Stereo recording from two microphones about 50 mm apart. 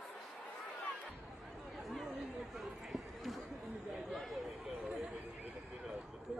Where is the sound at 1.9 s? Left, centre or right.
Centre.